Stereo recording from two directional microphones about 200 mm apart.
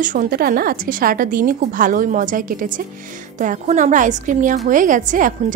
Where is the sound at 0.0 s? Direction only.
40° right (ahead or behind).